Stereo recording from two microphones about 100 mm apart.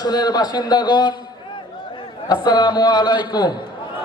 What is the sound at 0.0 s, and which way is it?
A man's voice, 40° left (ahead or behind).